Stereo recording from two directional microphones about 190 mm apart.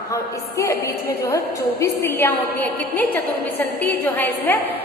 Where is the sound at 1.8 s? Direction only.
10° left (ahead or behind).